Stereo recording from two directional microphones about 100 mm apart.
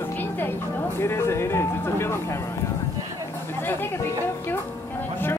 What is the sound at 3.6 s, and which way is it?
Speech, 20° left (ahead or behind).